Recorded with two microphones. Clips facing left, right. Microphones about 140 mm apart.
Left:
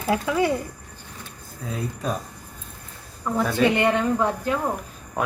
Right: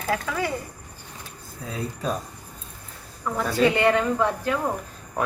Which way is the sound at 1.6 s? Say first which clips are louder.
Left 1 dB; centre (ahead or behind).